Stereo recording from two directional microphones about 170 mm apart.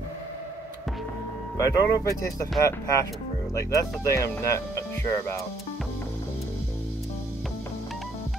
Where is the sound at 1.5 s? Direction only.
20° left (ahead or behind).